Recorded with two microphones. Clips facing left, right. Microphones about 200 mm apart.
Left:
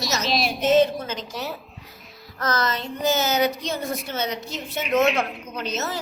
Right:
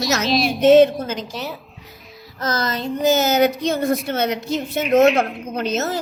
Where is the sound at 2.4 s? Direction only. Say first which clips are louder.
Right 2 dB; 35° right (ahead or behind).